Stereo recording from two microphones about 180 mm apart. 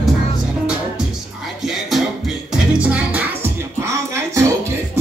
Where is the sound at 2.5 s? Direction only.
5° right (ahead or behind).